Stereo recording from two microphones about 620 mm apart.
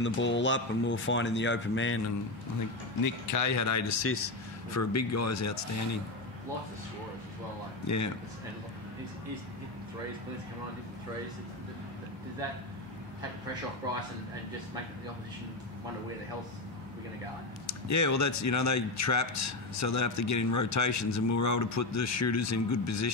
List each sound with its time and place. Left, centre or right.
0.0 s speech: centre
3.0 s speech: left
7.8 s a man's voice: left
17.6 s speech: left